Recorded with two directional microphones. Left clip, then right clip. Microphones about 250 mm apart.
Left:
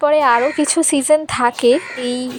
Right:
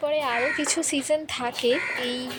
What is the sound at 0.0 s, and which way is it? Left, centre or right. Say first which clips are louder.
Speech: left 11 dB; left.